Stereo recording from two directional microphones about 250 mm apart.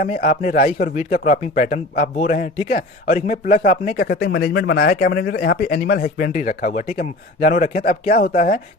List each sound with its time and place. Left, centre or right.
0.0 s speech: left